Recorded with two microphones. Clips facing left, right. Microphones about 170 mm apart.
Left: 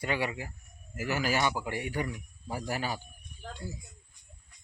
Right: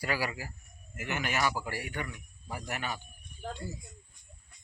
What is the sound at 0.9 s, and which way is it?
Speech, 35° left (ahead or behind).